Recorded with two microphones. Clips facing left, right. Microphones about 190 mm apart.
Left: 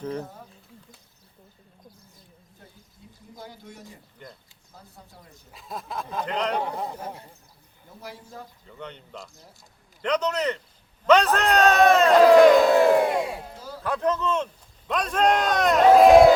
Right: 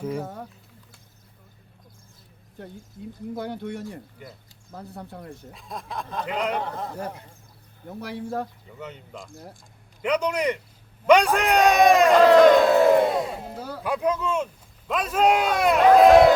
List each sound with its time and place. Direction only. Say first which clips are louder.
0.2 s speech: right 4 dB; 90° right
2.6 s speech: right 14 dB; 70° right (ahead or behind)
5.5 s a sound: left 4 dB; centre (ahead or behind)
6.2 s speech: even; 10° right (ahead or behind)
6.6 s a man's voice: left 1 dB; 10° left (ahead or behind)
7.9 s speech: right 10 dB; 65° right (ahead or behind)
8.8 s a sound: right 1 dB; 5° right (ahead or behind)
10.0 s speech: right 1 dB; 10° right (ahead or behind)
12.1 s crowd: left 2 dB; 5° left (ahead or behind)
13.6 s a sound: right 5 dB; 65° right (ahead or behind)
13.8 s speech: even; 10° right (ahead or behind)
15.9 s a sound: left 1 dB; centre (ahead or behind)